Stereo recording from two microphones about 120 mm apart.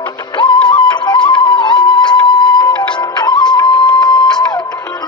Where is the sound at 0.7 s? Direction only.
40° left (ahead or behind).